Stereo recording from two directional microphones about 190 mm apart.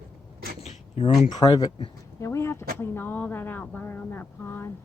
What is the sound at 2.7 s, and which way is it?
Speech, 10° left (ahead or behind).